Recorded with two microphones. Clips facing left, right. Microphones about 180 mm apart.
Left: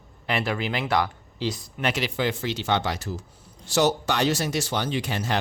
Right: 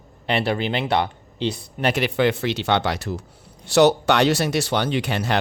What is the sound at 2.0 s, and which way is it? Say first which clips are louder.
Speech: right 6 dB; 65° right (ahead or behind).